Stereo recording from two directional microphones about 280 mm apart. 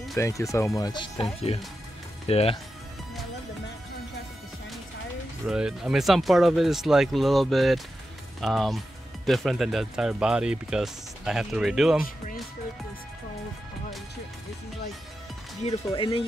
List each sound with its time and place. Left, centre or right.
0.2 s speech: centre
2.2 s speech: left
5.5 s speech: centre
15.6 s speech: centre